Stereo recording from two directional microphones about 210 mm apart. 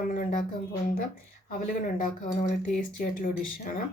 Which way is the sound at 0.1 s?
40° left (ahead or behind).